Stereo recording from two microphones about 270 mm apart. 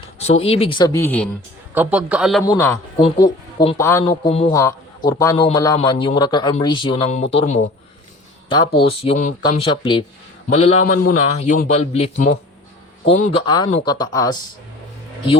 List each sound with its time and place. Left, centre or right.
0.2 s a man's voice: left; by 1.3 s centre
1.7 s a man's voice: centre
2.4 s a man's voice: centre
4.2 s a man's voice: left